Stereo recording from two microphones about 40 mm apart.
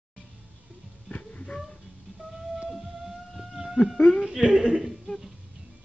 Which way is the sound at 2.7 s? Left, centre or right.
Centre.